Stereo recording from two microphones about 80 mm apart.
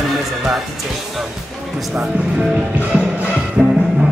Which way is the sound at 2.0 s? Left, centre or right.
Centre.